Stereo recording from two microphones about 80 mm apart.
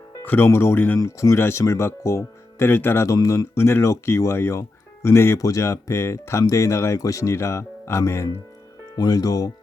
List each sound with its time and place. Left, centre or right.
0.3 s speech: left
0.9 s speech: left
9.0 s speech: left